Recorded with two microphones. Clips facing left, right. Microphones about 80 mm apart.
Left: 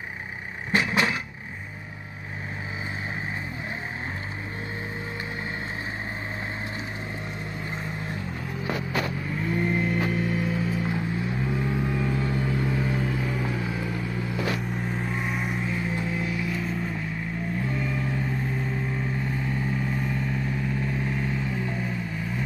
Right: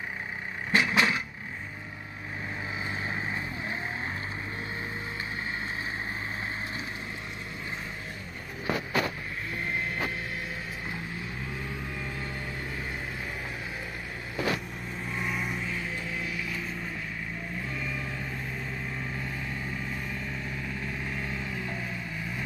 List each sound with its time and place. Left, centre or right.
0.7 s a sound: left
11.8 s vehicle: left
12.6 s vehicle: left
15.0 s vehicle: left
17.7 s vehicle: left